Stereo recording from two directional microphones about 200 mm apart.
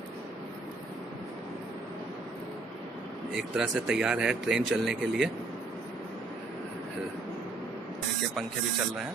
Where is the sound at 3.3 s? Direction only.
Centre (ahead or behind).